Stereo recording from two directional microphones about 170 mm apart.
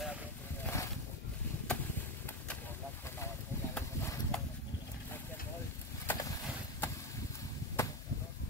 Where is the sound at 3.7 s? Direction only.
10° left (ahead or behind).